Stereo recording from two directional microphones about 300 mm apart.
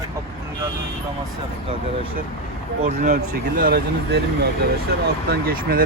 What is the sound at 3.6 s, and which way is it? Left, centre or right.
Speech, right.